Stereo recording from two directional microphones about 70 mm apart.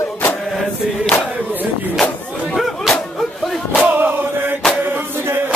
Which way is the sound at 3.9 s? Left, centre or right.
Right.